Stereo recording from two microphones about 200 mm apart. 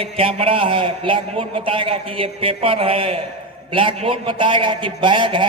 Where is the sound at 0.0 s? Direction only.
25° right (ahead or behind).